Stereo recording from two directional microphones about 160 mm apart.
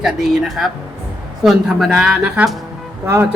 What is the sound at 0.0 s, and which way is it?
A woman's voice, centre (ahead or behind).